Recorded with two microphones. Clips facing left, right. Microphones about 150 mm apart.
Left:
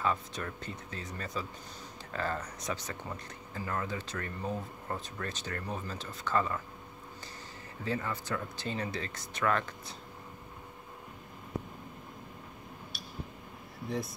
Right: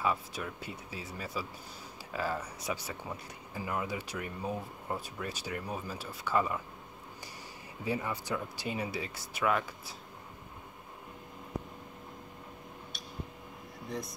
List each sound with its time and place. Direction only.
0.0 s speech: 10° right (ahead or behind)
7.8 s speech: 15° right (ahead or behind)
13.8 s speech: centre (ahead or behind)